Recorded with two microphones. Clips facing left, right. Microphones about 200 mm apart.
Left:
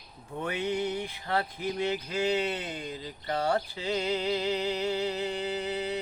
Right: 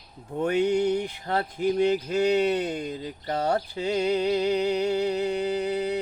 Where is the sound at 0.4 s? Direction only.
45° right (ahead or behind).